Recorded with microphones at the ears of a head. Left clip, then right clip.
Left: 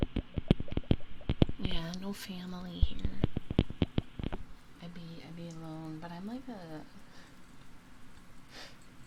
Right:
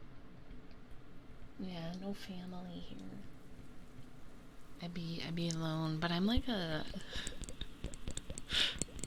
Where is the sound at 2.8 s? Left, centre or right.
Left.